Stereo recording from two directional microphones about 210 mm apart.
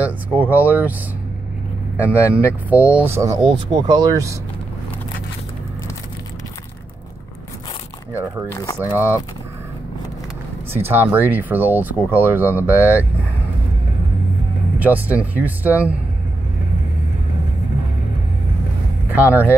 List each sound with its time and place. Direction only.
0.0 s speech: 5° right (ahead or behind)
2.0 s speech: 5° right (ahead or behind)
8.5 s speech: 15° left (ahead or behind)
8.7 s speech: 10° right (ahead or behind)
10.8 s speech: 10° right (ahead or behind)
14.8 s speech: 5° right (ahead or behind)
19.2 s speech: 10° right (ahead or behind)